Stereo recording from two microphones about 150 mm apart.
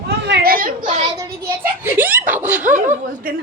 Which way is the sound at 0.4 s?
70° right (ahead or behind).